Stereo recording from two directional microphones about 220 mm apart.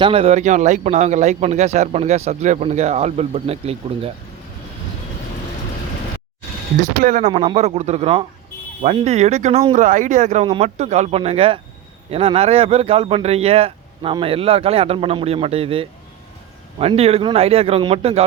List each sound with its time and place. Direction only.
0.0 s speech: 25° right (ahead or behind)
7.0 s speech: 35° right (ahead or behind)